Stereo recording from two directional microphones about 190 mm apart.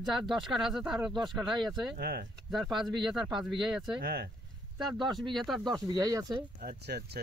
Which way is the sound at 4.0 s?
50° right (ahead or behind).